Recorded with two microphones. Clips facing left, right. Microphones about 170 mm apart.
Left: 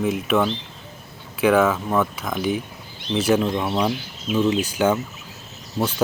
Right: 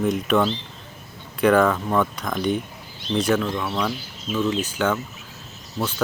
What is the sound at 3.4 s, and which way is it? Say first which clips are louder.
Speech: left 3 dB; 25° left (ahead or behind).